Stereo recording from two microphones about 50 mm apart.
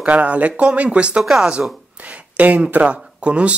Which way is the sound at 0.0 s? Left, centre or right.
Right.